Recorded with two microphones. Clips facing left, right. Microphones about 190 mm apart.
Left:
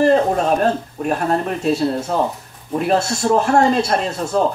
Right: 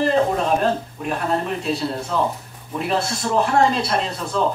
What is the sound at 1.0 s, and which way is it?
Speech, 45° left (ahead or behind).